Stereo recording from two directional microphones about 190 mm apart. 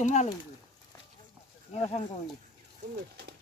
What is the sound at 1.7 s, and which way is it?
Speech, 35° left (ahead or behind).